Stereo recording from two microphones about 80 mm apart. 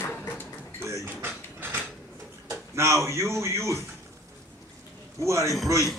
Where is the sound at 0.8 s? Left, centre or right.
Right.